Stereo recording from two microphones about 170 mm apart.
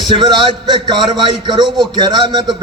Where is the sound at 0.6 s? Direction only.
25° right (ahead or behind).